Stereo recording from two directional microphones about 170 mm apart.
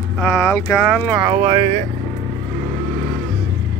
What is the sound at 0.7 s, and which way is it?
Speech, 5° left (ahead or behind).